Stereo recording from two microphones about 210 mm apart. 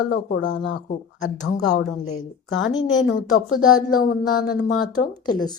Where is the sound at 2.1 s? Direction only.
80° left.